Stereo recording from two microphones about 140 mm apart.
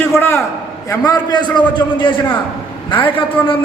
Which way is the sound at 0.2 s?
20° left (ahead or behind).